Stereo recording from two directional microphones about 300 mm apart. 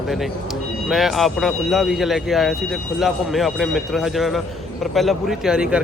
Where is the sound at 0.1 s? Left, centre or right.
Centre.